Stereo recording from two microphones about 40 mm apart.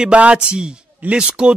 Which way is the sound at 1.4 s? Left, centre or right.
Right.